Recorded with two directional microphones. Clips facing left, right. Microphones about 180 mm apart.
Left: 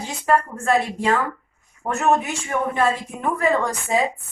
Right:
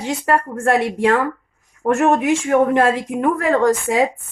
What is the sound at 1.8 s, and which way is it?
Speech, 90° right.